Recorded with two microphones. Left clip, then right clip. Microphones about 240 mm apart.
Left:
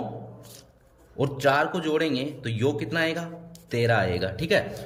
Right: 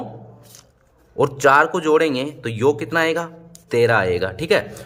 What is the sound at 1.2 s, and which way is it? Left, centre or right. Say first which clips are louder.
Speech: right 8 dB; centre.